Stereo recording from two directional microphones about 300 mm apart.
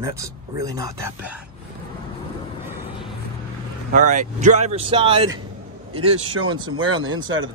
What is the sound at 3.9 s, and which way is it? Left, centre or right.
Speech, right.